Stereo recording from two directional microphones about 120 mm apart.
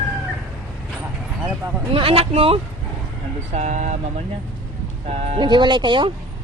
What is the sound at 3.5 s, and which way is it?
Speech, 80° right.